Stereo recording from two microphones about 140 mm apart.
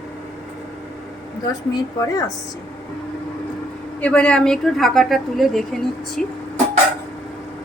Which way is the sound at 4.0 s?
10° left (ahead or behind).